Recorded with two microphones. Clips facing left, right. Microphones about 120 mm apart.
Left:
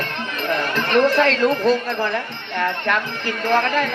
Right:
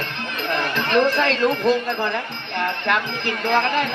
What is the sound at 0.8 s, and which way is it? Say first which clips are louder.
Speech: left 3 dB; 45° left (ahead or behind).